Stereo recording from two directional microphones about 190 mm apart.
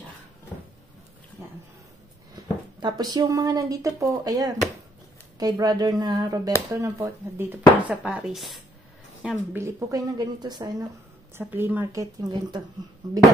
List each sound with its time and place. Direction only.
2.3 s speech: 20° right (ahead or behind)